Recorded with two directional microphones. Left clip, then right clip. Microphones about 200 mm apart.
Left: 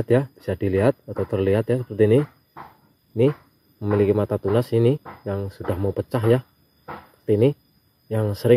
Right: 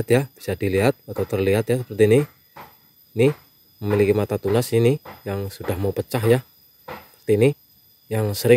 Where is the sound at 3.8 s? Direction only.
20° right (ahead or behind).